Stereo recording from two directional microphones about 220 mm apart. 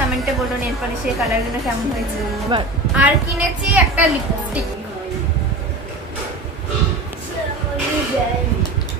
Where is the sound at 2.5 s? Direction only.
25° right (ahead or behind).